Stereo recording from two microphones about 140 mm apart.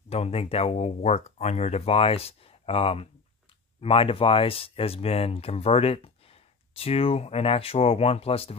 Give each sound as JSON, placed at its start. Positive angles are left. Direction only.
{"t": 0.1, "sound": "speech", "side_deg": 45}